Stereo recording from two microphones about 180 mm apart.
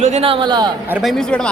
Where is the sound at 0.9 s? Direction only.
Centre (ahead or behind).